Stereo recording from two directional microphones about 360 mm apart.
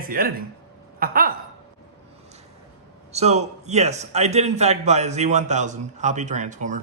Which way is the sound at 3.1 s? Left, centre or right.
Centre.